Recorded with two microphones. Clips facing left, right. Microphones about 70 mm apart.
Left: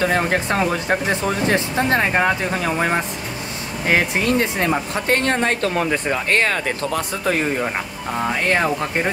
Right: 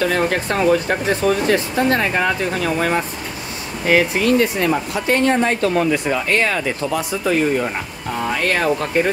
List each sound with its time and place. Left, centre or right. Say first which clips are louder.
0.0 s speech: right 1 dB; left
5.1 s speech: right 3 dB; left
8.4 s speech: left 1 dB; left